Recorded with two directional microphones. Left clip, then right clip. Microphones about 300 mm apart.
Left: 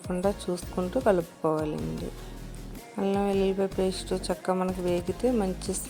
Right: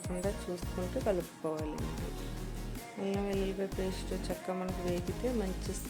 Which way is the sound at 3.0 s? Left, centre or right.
Left.